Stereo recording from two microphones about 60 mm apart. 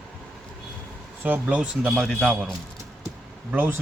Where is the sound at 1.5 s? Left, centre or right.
Centre.